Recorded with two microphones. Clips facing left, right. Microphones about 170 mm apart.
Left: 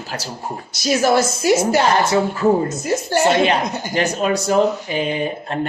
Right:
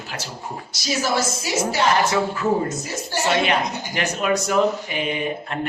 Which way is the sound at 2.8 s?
55° left (ahead or behind).